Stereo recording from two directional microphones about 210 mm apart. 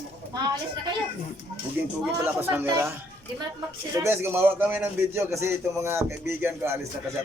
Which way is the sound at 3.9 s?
10° right (ahead or behind).